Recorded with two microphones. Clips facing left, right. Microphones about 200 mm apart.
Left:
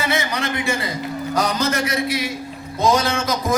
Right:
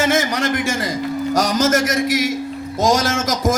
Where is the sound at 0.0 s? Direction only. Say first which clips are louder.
Right 5 dB; 45° right (ahead or behind).